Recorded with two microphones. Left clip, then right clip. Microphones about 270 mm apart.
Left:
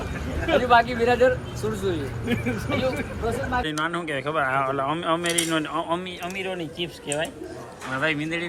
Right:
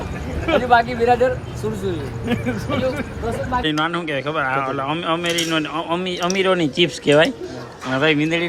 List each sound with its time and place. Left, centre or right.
0.4 s speech: centre
6.1 s speech: centre
7.9 s speech: centre